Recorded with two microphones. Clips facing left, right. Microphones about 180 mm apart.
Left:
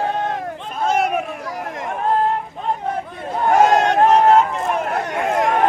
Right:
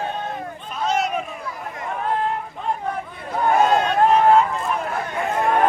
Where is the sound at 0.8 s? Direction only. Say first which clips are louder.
Left 3 dB; 55° left (ahead or behind).